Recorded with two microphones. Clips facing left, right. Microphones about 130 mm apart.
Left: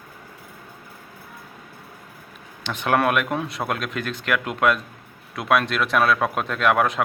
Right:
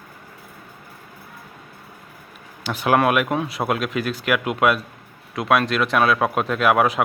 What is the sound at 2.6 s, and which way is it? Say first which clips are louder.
Speech: right 3 dB; 5° right (ahead or behind).